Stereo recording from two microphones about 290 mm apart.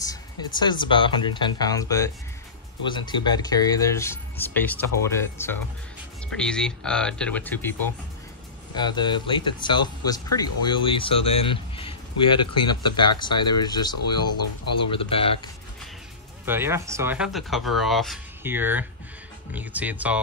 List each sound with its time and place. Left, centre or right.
0.0 s speech: centre
8.7 s speech: centre
14.2 s speech: left
14.9 s speech: centre
16.4 s speech: centre